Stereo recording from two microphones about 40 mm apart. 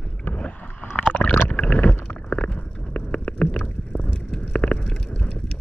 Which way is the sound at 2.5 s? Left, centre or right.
Left.